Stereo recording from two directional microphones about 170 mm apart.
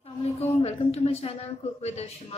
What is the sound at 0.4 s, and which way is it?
A woman's voice, 40° left (ahead or behind).